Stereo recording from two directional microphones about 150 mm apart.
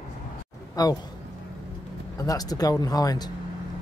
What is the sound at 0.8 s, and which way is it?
Speech, 25° left (ahead or behind).